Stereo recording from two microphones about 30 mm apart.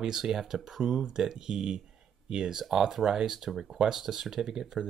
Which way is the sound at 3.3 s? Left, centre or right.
Centre.